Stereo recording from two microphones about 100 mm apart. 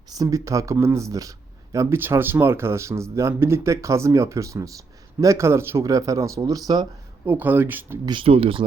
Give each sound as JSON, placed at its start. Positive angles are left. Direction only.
{"t": 0.2, "sound": "speech", "side_deg": -35}
{"t": 7.3, "sound": "speech", "side_deg": -20}
{"t": 8.2, "sound": "speech", "side_deg": -70}